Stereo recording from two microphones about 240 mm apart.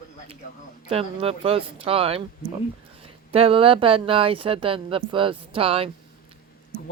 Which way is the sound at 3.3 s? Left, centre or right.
Right.